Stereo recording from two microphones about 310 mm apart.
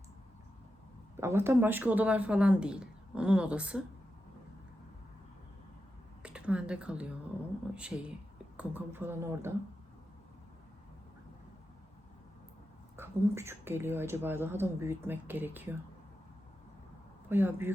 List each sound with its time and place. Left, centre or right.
1.1 s a woman's voice: centre
6.2 s a woman's voice: centre
13.0 s speech: centre
17.2 s speech: centre